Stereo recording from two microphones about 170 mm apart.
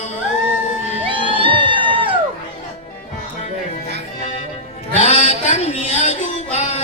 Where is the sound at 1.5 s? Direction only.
30° right (ahead or behind).